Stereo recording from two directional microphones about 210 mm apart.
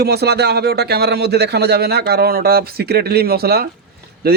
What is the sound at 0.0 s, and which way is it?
Speech, 50° right (ahead or behind).